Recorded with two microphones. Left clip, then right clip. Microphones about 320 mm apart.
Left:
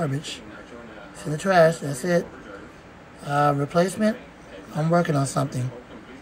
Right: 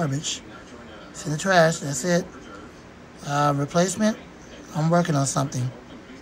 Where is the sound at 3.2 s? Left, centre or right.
Centre.